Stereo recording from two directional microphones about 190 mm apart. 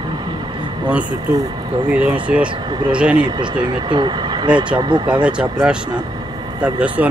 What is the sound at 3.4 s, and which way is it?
Speech, 25° right (ahead or behind).